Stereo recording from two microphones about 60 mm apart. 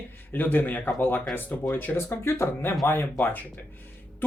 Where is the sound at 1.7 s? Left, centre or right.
Left.